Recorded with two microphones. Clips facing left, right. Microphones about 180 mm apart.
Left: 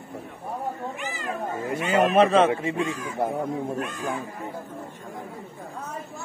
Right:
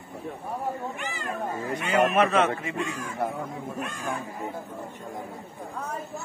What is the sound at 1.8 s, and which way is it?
Speech, 25° left (ahead or behind).